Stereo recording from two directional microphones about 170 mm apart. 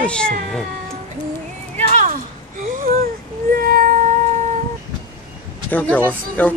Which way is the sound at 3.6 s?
55° right (ahead or behind).